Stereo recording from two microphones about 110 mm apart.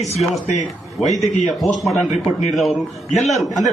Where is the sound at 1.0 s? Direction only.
Centre (ahead or behind).